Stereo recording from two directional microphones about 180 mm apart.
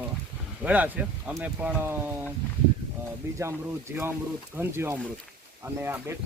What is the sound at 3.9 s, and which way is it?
Speech, 10° right (ahead or behind).